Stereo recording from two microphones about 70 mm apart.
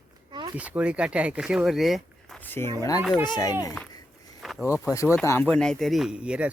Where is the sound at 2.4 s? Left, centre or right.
Left.